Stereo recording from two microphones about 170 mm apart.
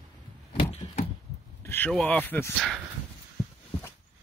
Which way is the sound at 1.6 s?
10° left (ahead or behind).